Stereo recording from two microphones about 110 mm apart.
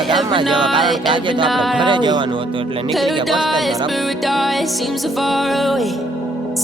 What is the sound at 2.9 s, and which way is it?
Music, centre (ahead or behind).